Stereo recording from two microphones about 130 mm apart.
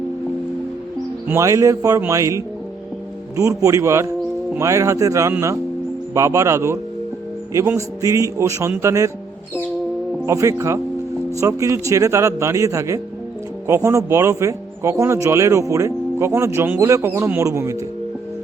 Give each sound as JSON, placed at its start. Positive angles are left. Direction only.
{"t": 1.3, "sound": "a man's voice", "side_deg": -25}
{"t": 10.2, "sound": "a man's voice", "side_deg": -25}